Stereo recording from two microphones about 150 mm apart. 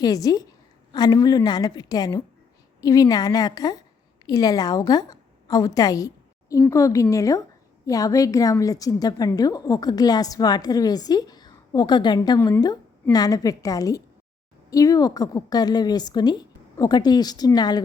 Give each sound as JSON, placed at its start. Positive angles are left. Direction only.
{"t": 0.0, "sound": "a woman's voice", "side_deg": 25}